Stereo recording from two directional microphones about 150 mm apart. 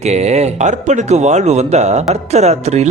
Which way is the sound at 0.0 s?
45° right (ahead or behind).